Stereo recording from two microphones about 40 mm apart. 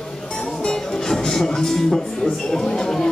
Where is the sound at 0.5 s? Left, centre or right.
Centre.